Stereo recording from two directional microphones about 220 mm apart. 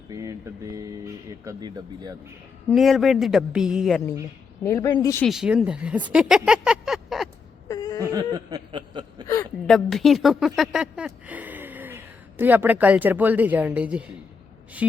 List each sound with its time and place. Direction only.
0.1 s speech: 15° right (ahead or behind)
2.6 s a woman's voice: centre (ahead or behind)
4.6 s a woman's voice: 15° left (ahead or behind)
5.2 s speech: centre (ahead or behind)
7.7 s whimper: 15° left (ahead or behind)
8.0 s chuckle: 15° right (ahead or behind)
9.2 s a sound: 15° left (ahead or behind)
9.6 s speech: centre (ahead or behind)